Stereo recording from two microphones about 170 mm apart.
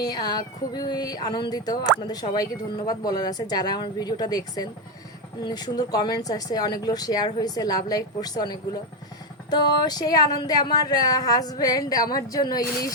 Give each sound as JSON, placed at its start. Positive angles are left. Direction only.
{"t": 0.0, "sound": "speech", "side_deg": 25}